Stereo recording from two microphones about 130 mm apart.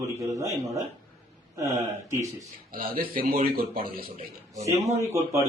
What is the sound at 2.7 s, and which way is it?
Speech, 90° right.